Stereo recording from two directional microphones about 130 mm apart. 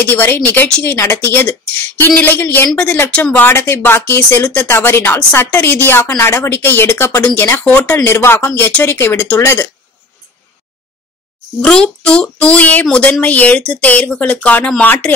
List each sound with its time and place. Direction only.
0.0 s speech: 15° left (ahead or behind)
11.6 s speech: 5° left (ahead or behind)